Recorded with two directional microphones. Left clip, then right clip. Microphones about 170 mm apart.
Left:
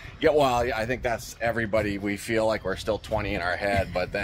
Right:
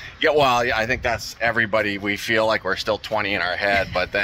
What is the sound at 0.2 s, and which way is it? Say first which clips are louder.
Speech: right 4 dB; centre (ahead or behind).